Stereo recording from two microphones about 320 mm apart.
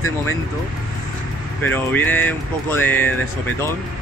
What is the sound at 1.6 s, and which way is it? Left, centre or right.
Speech, centre.